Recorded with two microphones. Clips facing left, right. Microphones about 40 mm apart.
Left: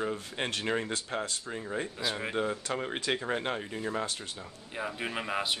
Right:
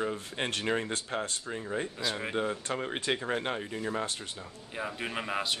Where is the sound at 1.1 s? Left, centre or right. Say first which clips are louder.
Right 1 dB; right.